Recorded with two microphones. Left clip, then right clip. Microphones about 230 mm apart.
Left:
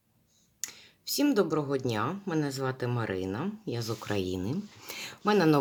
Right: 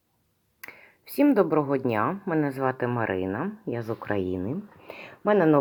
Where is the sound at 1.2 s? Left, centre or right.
Centre.